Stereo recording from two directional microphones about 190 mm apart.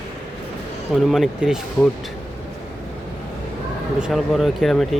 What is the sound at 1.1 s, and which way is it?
Speech, centre (ahead or behind).